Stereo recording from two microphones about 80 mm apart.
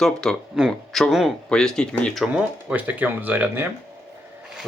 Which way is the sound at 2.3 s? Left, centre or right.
Centre.